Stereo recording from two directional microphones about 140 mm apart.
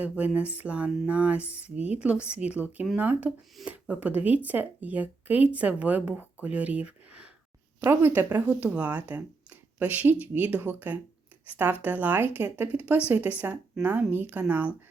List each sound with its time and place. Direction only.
0.0 s speech: 10° right (ahead or behind)